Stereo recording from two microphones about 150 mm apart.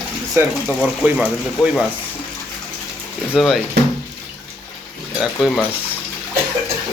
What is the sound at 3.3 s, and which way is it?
Speech, centre (ahead or behind).